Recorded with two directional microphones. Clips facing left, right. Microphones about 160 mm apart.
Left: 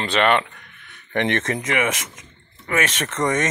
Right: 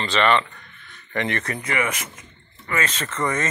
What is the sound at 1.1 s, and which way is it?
Speech, 85° left.